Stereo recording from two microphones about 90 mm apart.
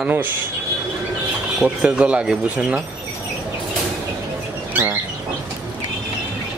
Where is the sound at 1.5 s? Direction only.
10° right (ahead or behind).